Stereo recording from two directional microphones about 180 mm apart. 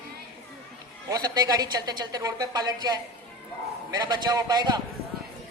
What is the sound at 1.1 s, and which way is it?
A woman's voice, 20° right (ahead or behind).